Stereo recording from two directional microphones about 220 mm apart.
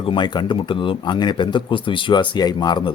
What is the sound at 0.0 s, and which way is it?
Speech, 20° left (ahead or behind).